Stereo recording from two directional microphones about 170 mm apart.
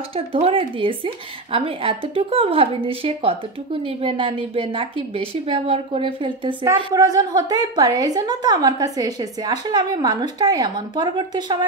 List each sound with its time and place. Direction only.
0.1 s speech: 35° right (ahead or behind)
6.6 s a woman's voice: 20° right (ahead or behind)